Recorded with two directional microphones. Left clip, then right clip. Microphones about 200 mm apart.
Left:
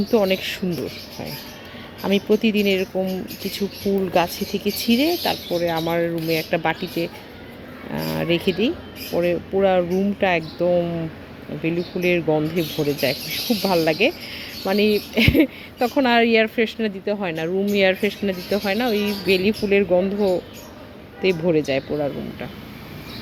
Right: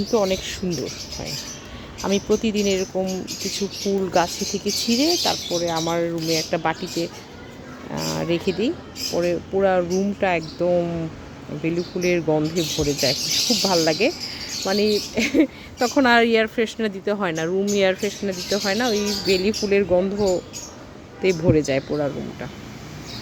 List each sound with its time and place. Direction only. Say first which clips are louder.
0.1 s speech: left 2 dB; 10° left (ahead or behind)
2.0 s speech: left 2 dB; 5° left (ahead or behind)
4.1 s speech: even; 5° left (ahead or behind)
15.8 s speech: right 1 dB; 5° right (ahead or behind)
18.0 s speech: left 2 dB; 15° left (ahead or behind)
18.6 s speech: even; centre (ahead or behind)